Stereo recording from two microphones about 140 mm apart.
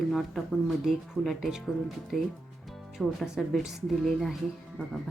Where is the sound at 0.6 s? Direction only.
Centre (ahead or behind).